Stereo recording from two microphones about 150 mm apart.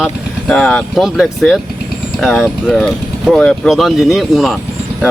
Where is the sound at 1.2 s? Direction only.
Centre (ahead or behind).